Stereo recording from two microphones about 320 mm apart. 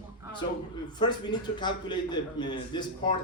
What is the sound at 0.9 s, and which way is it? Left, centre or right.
A man's voice, centre.